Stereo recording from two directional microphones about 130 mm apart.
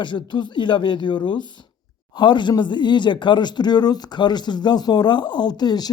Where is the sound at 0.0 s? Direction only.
35° left (ahead or behind).